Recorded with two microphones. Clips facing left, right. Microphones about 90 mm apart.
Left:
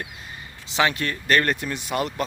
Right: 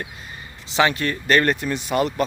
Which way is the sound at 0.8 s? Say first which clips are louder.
Right 3 dB; centre (ahead or behind).